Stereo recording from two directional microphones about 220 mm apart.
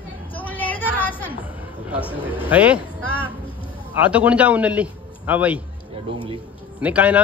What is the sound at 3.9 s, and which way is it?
Speech, 5° right (ahead or behind).